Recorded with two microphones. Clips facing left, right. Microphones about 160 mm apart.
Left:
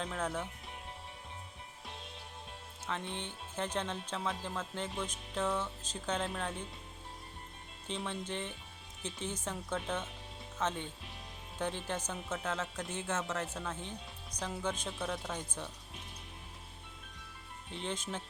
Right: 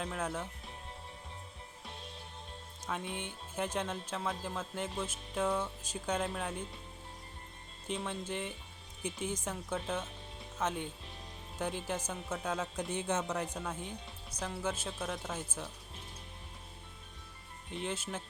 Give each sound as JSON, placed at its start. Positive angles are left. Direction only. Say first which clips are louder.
{"t": 0.0, "sound": "speech", "louder": "even", "side_deg": -5}
{"t": 2.8, "sound": "speech", "louder": "right 1 dB", "side_deg": -10}
{"t": 7.9, "sound": "speech", "louder": "right 1 dB", "side_deg": -5}
{"t": 17.7, "sound": "speech", "louder": "right 1 dB", "side_deg": -5}